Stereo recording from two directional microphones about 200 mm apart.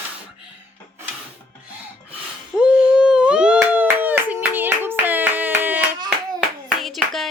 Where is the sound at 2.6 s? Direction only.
5° right (ahead or behind).